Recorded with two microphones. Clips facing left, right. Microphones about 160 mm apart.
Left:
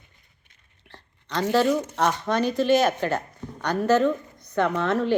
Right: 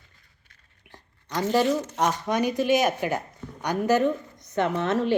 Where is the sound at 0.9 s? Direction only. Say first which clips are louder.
Left 2 dB; 15° right (ahead or behind).